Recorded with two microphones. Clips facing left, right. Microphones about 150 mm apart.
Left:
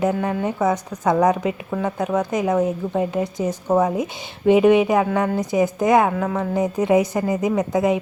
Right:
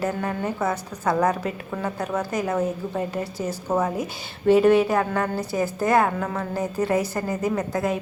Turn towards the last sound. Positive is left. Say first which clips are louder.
# left 5 dB
turn(degrees=20)  # may be behind; listen again after turning